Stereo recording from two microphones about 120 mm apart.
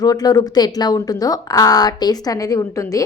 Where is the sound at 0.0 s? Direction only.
30° left (ahead or behind).